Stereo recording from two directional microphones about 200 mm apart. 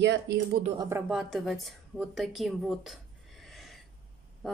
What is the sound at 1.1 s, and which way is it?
A woman's voice, centre (ahead or behind).